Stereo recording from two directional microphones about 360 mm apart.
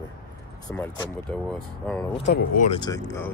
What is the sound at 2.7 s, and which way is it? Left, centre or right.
Speech, centre.